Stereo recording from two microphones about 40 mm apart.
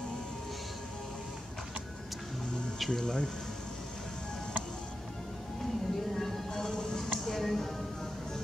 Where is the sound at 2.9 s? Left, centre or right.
Centre.